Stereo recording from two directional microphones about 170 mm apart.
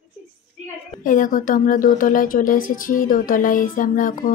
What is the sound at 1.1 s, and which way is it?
Speech, 50° left (ahead or behind).